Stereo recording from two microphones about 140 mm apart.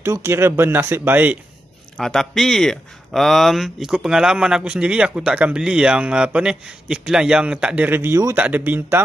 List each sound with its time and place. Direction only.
0.0 s speech: 20° right (ahead or behind)
2.0 s speech: 5° left (ahead or behind); by 9.0 s 15° right (ahead or behind)